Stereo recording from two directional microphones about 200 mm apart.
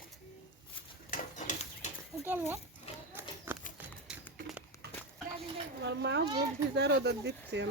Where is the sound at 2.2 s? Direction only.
10° right (ahead or behind).